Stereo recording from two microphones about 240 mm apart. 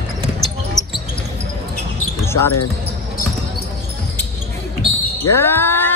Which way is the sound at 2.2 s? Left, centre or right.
Centre.